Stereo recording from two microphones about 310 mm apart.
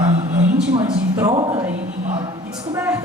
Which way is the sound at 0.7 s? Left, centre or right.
Centre.